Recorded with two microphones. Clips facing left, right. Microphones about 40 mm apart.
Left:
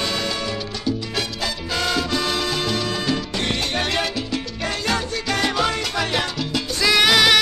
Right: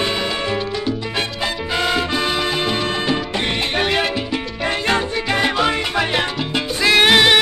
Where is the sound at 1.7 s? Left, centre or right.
Right.